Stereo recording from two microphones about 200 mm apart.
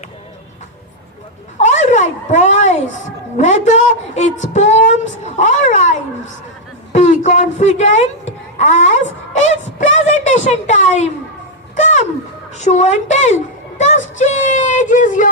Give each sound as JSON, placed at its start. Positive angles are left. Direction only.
{"t": 1.6, "sound": "a sound", "side_deg": 35}
{"t": 3.3, "sound": "a woman's voice", "side_deg": 35}
{"t": 11.8, "sound": "music", "side_deg": 35}
{"t": 12.5, "sound": "a woman's voice", "side_deg": 35}